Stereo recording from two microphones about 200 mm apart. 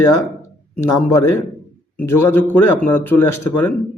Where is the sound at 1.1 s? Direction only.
15° left (ahead or behind).